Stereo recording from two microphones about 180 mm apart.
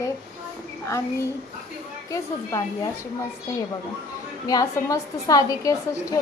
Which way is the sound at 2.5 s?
15° left (ahead or behind).